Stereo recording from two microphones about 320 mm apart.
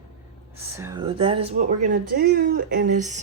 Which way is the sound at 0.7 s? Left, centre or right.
Centre.